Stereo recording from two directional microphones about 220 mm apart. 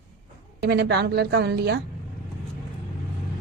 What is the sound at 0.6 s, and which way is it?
A woman's voice, 50° right (ahead or behind).